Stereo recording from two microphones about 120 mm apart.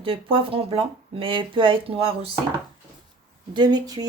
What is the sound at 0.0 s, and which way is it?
Speech, 50° right (ahead or behind).